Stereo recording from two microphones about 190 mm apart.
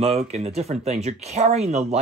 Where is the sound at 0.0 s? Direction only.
35° right (ahead or behind).